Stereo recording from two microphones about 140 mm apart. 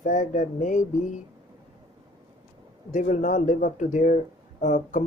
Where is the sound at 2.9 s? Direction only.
60° left (ahead or behind).